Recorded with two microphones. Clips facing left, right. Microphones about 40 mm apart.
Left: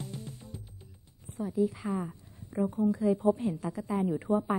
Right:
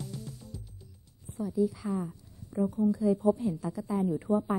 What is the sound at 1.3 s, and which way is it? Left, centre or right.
A woman's voice, left.